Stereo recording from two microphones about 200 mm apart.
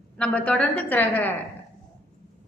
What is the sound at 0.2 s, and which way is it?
A woman's voice, 5° left (ahead or behind).